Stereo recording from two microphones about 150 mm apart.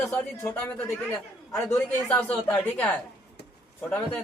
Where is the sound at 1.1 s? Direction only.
20° left (ahead or behind).